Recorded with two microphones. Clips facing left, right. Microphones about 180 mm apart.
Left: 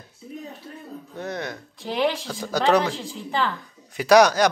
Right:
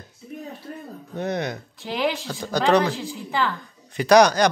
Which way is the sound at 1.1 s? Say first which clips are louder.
Right 5 dB; 20° right (ahead or behind).